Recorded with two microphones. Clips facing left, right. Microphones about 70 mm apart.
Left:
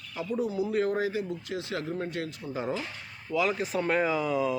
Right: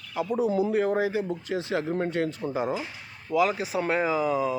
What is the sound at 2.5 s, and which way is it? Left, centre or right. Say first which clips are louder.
Speech: right 4 dB; centre.